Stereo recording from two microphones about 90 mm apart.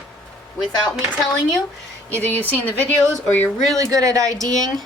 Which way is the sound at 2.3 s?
20° left (ahead or behind).